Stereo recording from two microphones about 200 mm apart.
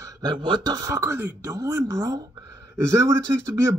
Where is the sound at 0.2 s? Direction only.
20° right (ahead or behind).